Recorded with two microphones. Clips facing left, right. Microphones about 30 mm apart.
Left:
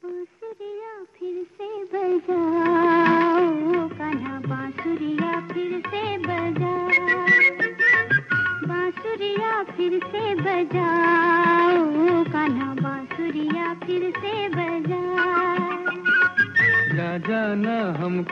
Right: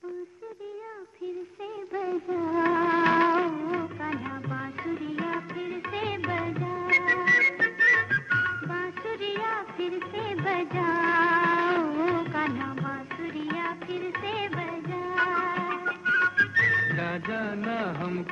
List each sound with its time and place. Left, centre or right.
1.9 s a sound: centre
2.2 s humming: centre
2.5 s music: centre
3.4 s music: centre
6.9 s music: centre
7.6 s music: centre
14.6 s music of bollywood: left
14.9 s music: centre
17.3 s music: left
17.6 s carnatic music: centre